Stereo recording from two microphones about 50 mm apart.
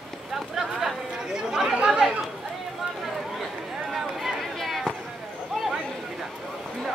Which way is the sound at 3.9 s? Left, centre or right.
Centre.